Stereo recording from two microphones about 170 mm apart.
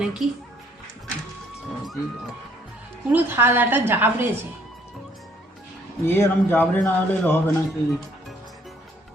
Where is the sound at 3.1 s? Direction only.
10° right (ahead or behind).